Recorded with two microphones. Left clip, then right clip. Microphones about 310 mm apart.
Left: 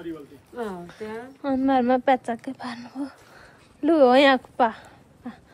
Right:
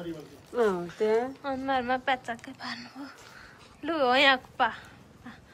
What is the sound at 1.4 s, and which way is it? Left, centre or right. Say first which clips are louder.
A woman's voice: left 7 dB; centre.